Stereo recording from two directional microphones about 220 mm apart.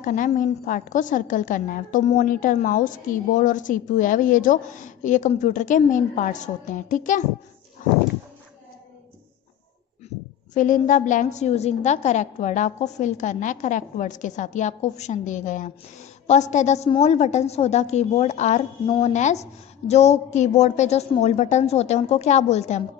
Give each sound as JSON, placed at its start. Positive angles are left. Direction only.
{"t": 0.0, "sound": "a woman's voice", "side_deg": 35}
{"t": 10.5, "sound": "a woman's voice", "side_deg": 35}